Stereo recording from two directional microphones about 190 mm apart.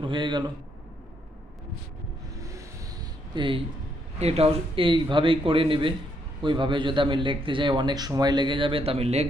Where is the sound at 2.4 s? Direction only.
15° right (ahead or behind).